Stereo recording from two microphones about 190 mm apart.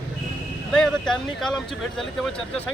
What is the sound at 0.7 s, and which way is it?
Speech, 5° left (ahead or behind).